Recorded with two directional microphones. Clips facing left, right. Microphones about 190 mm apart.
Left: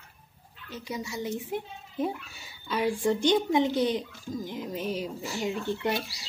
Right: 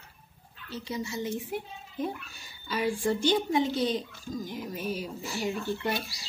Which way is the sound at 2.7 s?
20° left (ahead or behind).